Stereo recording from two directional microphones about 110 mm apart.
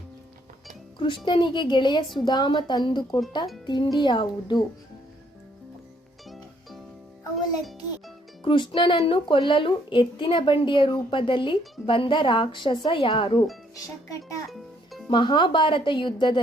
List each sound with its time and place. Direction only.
0.9 s a woman's voice: 45° left (ahead or behind)
6.3 s music: centre (ahead or behind)
7.6 s a child's voice: centre (ahead or behind)
8.4 s a woman's voice: 45° left (ahead or behind)
13.7 s a child's voice: 30° left (ahead or behind)
15.1 s a woman's voice: 45° left (ahead or behind)